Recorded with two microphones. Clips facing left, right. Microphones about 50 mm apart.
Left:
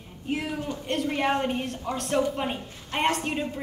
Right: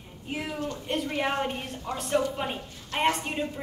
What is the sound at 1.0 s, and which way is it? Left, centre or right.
A woman's voice, centre.